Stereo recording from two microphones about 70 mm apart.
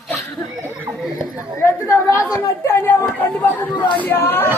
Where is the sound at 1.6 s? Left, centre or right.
Left.